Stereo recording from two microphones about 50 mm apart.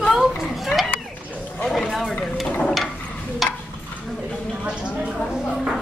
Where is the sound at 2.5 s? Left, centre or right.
Centre.